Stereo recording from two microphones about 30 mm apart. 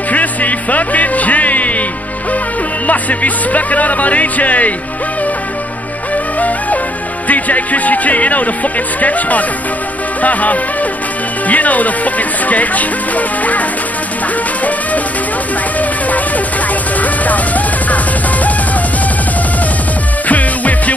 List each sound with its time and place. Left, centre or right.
0.1 s music: left
2.9 s speech: left
7.2 s speech: left
15.8 s speech: left
17.0 s music: left
20.2 s music: left